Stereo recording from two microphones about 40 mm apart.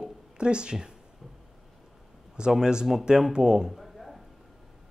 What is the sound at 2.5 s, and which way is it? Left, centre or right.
Speech, centre.